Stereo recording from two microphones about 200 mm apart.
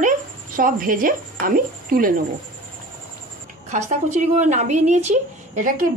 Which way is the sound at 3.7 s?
35° right (ahead or behind).